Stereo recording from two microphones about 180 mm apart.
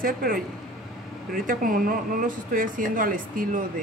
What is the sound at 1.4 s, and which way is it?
Speech, 50° right (ahead or behind).